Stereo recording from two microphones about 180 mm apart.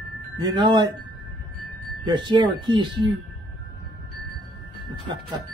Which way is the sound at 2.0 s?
25° right (ahead or behind).